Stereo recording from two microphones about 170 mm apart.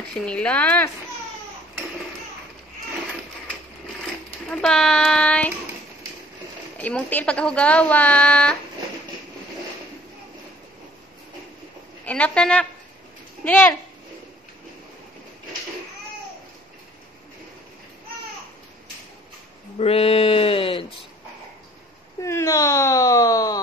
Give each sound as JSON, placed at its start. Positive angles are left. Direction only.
{"t": 0.2, "sound": "speech", "side_deg": 5}
{"t": 4.0, "sound": "speech", "side_deg": 5}
{"t": 6.8, "sound": "speech", "side_deg": 10}
{"t": 12.0, "sound": "a child's voice", "side_deg": 5}
{"t": 19.8, "sound": "a sound", "side_deg": 35}
{"t": 22.2, "sound": "a sound", "side_deg": 15}